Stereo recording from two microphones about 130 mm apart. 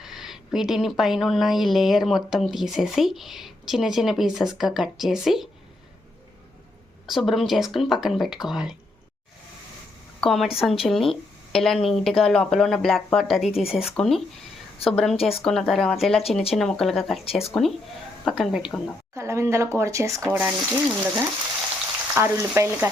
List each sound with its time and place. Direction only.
0.0 s a woman's voice: 5° right (ahead or behind)
7.1 s a woman's voice: centre (ahead or behind)
10.2 s a woman's voice: centre (ahead or behind)
15.1 s speech: 45° left (ahead or behind)
15.4 s a woman's voice: centre (ahead or behind)
19.1 s speech: 20° right (ahead or behind)
20.3 s speech: 10° right (ahead or behind)
22.1 s speech: 20° right (ahead or behind)